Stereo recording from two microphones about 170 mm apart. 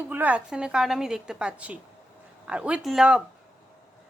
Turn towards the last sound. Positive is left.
turn(degrees=-5)  # may be behind; listen again after turning